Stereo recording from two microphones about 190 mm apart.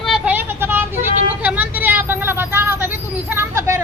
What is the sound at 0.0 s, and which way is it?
Vehicle, 5° right (ahead or behind).